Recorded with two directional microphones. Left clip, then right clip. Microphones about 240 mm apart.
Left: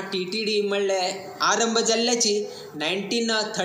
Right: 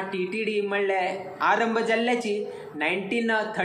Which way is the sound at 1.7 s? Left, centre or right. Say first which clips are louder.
Left 2 dB; left.